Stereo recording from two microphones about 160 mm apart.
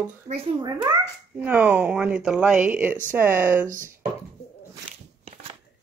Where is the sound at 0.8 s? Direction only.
15° right (ahead or behind).